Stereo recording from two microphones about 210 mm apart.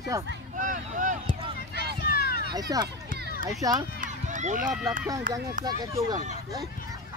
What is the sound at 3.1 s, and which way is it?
Children playing, 40° right (ahead or behind).